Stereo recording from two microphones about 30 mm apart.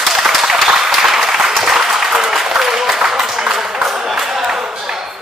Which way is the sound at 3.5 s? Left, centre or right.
Centre.